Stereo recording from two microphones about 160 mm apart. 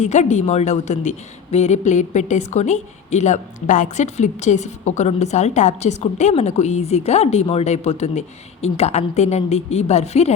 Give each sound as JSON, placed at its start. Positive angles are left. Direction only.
{"t": 0.0, "sound": "a woman's voice", "side_deg": 45}